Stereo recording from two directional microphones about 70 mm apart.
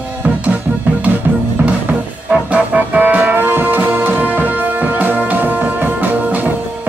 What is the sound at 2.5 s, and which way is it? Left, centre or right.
Music, right.